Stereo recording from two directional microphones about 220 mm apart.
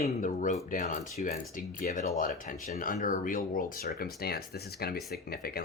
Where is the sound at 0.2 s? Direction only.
30° left (ahead or behind).